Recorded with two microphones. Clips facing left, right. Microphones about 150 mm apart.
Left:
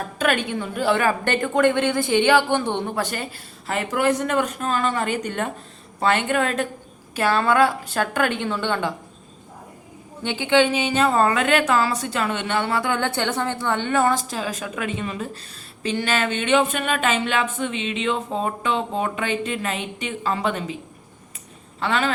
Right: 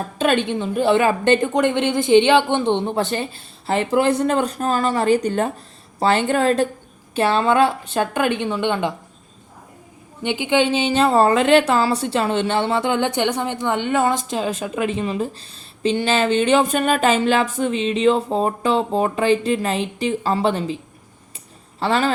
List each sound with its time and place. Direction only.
0.2 s a woman's voice: 25° right (ahead or behind)
10.2 s a woman's voice: 15° right (ahead or behind)
10.7 s a woman's voice: 30° right (ahead or behind)
21.8 s speech: 35° right (ahead or behind)